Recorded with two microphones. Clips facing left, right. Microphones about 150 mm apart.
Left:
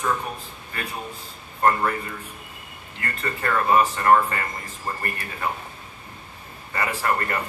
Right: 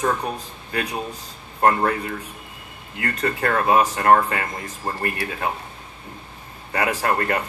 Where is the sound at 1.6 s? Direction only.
65° right (ahead or behind).